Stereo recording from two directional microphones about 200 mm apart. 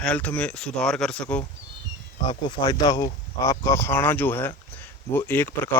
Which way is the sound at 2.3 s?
20° left (ahead or behind).